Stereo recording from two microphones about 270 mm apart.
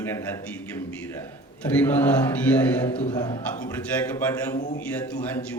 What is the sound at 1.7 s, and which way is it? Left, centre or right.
A man's voice, centre.